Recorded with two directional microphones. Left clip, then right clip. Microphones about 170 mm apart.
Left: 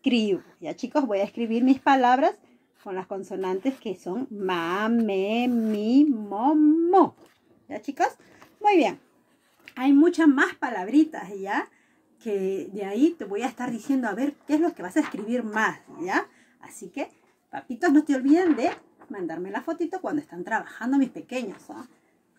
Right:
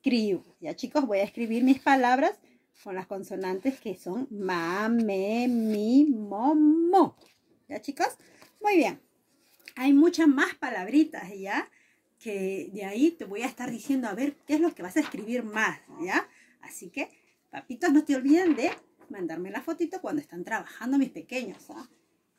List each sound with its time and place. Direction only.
0.0 s a woman's voice: 10° right (ahead or behind)